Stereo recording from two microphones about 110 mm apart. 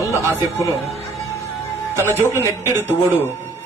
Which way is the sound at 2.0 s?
20° left (ahead or behind).